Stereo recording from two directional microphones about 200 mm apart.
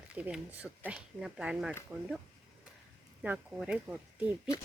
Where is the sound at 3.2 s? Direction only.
5° right (ahead or behind).